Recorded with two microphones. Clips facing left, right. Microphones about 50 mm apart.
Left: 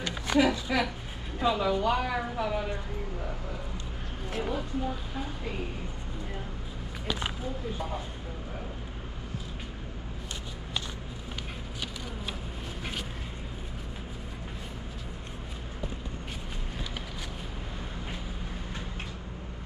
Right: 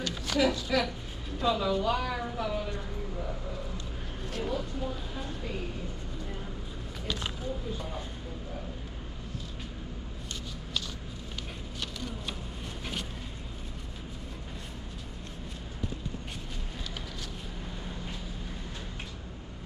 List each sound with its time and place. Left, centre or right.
0.0 s a woman's voice: left
4.3 s a woman's voice: centre
7.1 s a sound: centre